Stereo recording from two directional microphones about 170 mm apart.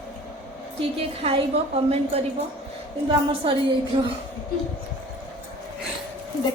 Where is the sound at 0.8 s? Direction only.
35° right (ahead or behind).